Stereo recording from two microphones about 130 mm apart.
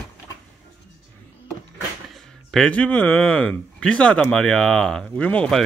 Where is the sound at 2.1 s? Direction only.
5° left (ahead or behind).